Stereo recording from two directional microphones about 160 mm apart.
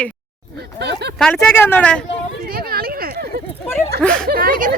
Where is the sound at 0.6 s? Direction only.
90° right.